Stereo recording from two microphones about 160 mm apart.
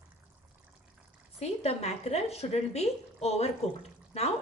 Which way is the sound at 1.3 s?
40° left (ahead or behind).